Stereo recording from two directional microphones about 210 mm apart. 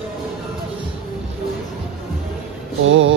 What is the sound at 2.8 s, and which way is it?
Music, 65° right (ahead or behind).